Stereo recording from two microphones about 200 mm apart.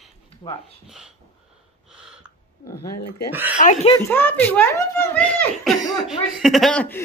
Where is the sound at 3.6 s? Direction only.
40° left (ahead or behind).